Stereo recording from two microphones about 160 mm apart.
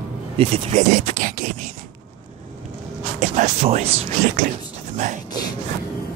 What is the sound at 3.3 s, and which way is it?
Speech, 45° right (ahead or behind).